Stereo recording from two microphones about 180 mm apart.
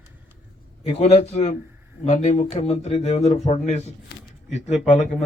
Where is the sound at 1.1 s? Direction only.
35° left (ahead or behind).